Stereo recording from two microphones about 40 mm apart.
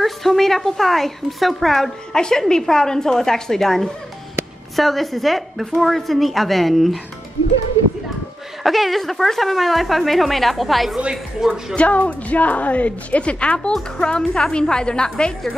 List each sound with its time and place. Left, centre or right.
0.0 s speech: centre
2.1 s a woman's voice: centre
8.6 s speech: centre
11.0 s speech: right
11.7 s a woman's voice: left